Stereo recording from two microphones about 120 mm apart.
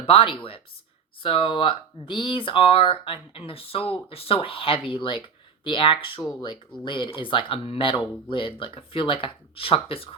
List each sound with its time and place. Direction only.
0.0 s speech: 50° left (ahead or behind)